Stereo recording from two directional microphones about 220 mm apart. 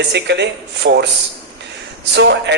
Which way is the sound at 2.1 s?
50° right (ahead or behind).